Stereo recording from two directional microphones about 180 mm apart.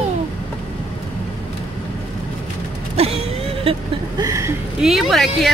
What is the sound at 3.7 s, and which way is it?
Speech, 30° right (ahead or behind).